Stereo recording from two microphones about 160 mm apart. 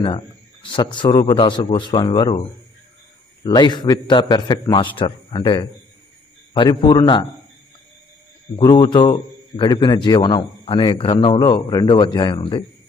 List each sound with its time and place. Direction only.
0.0 s a man's voice: 35° left (ahead or behind)
3.4 s a man's voice: 25° left (ahead or behind)
8.5 s a man's voice: 30° left (ahead or behind)